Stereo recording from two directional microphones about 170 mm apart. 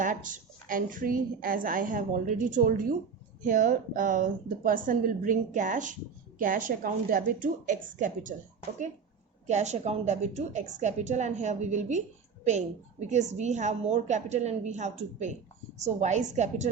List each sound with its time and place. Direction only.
0.0 s a woman's voice: 50° right (ahead or behind)
9.5 s a woman's voice: 40° right (ahead or behind)